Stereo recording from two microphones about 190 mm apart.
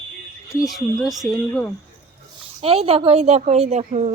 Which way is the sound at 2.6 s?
30° right (ahead or behind).